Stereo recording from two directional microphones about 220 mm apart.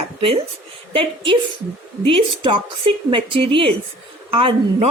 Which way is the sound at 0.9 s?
20° right (ahead or behind).